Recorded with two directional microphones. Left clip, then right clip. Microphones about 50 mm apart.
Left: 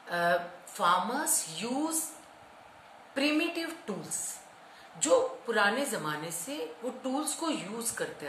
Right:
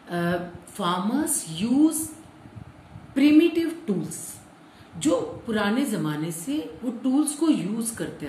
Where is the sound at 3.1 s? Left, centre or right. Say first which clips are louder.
Right 10 dB; left.